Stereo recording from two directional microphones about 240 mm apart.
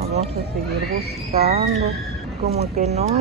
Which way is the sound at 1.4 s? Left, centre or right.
Right.